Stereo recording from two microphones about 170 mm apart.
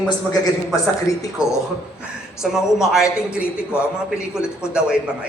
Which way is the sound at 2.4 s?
5° right (ahead or behind).